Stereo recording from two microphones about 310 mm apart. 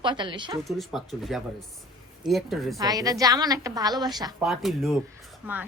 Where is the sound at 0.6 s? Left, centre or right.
Centre.